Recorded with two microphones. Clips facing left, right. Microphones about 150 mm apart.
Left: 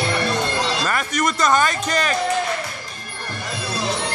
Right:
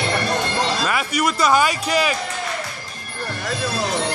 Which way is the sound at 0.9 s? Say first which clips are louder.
Right 1 dB; 10° right (ahead or behind).